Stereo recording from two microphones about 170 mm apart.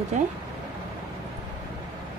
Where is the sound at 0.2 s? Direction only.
45° right (ahead or behind).